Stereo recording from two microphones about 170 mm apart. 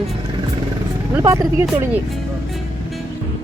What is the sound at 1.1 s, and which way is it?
Speech, 20° right (ahead or behind).